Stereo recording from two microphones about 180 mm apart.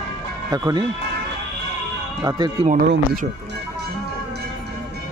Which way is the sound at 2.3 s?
20° right (ahead or behind).